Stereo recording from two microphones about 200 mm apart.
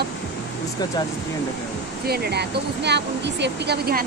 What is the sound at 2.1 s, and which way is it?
Speech, 55° right (ahead or behind).